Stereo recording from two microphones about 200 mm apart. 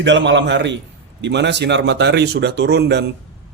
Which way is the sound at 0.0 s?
65° right (ahead or behind).